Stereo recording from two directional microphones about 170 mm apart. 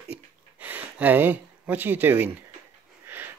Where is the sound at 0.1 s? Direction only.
10° right (ahead or behind).